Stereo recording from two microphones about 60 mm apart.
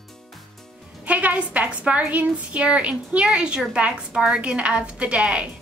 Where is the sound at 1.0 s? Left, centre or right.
Right.